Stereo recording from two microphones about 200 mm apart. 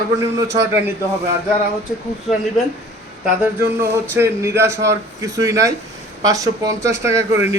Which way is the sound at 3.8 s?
15° right (ahead or behind).